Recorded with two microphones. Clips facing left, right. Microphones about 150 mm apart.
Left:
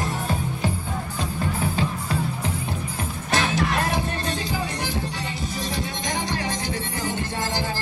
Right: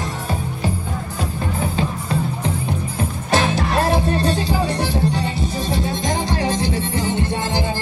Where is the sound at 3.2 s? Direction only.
30° right (ahead or behind).